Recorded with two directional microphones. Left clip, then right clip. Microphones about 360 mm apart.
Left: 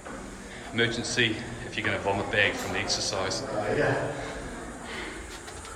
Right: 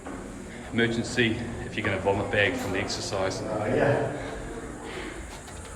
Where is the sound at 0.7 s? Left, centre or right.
Centre.